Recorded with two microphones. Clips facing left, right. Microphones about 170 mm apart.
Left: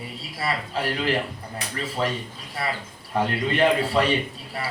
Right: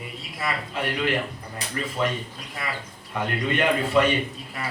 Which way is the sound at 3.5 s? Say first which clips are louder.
Left 1 dB; 35° left (ahead or behind).